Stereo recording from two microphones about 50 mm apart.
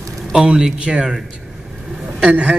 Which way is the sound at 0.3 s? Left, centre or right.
Centre.